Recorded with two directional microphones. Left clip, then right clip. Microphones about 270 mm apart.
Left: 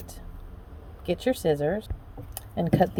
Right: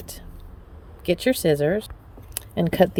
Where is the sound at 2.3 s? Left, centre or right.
Right.